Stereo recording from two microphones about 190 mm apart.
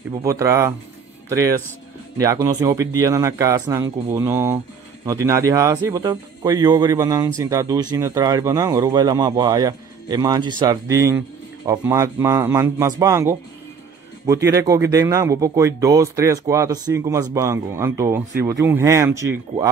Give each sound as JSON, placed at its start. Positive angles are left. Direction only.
{"t": 0.1, "sound": "speech", "side_deg": -15}
{"t": 2.1, "sound": "speech", "side_deg": -15}